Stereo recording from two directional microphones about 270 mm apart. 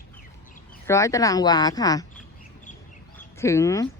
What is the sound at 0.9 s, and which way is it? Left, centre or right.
A woman's voice, centre.